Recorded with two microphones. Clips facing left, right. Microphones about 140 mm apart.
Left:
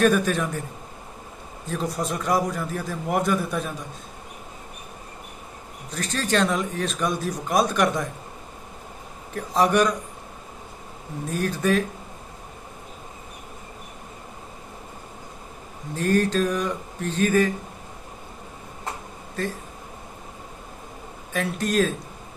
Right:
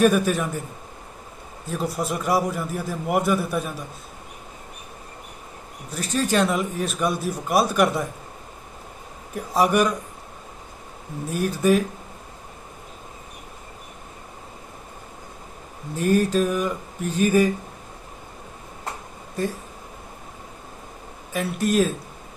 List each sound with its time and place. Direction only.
0.0 s a man's voice: 10° right (ahead or behind)
1.7 s a man's voice: 5° right (ahead or behind)
5.9 s a man's voice: 10° right (ahead or behind)
9.3 s a man's voice: 10° right (ahead or behind)
11.3 s a man's voice: 10° right (ahead or behind)
16.0 s a man's voice: 10° right (ahead or behind)
19.4 s a man's voice: 15° right (ahead or behind)
21.3 s a man's voice: 5° right (ahead or behind)